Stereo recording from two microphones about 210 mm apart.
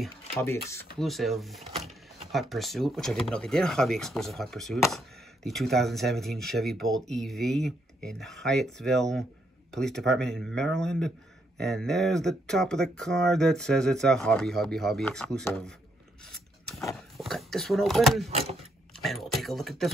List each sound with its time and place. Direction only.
0.9 s a man's voice: centre (ahead or behind)
1.6 s drawer open or close: 30° right (ahead or behind)
2.5 s a man's voice: centre (ahead or behind)
16.3 s a sound: centre (ahead or behind)
18.3 s speech: 30° right (ahead or behind)
19.0 s a man's voice: centre (ahead or behind)